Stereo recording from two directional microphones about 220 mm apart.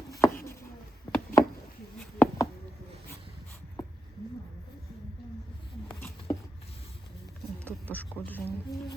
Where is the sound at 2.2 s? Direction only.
15° left (ahead or behind).